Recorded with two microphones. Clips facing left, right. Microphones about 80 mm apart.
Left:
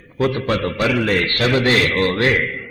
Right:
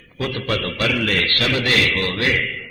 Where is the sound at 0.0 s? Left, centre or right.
Left.